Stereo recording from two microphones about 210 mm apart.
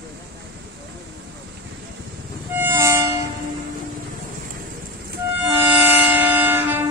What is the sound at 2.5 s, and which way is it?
Music, 10° right (ahead or behind).